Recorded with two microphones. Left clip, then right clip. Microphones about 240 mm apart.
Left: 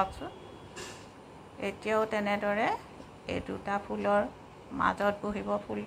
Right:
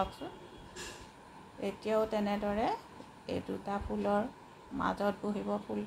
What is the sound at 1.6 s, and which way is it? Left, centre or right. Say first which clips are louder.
Speech: left 2 dB; centre.